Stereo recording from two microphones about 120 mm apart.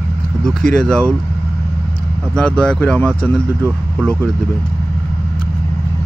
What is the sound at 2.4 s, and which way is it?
Speech, 5° left (ahead or behind).